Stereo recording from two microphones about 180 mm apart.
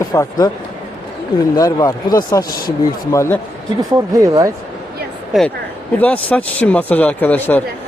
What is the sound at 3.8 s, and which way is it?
Speech, 20° right (ahead or behind).